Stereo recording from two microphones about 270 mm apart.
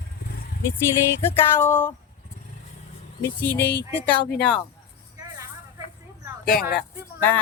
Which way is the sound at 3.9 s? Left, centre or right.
Centre.